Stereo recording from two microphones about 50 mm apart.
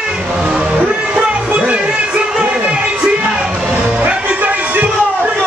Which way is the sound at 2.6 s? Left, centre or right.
Right.